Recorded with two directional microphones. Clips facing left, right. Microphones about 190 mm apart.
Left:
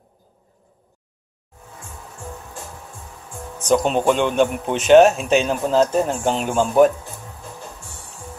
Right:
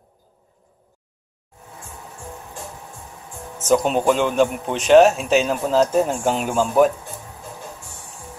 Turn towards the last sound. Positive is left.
turn(degrees=0)  # may be behind; listen again after turning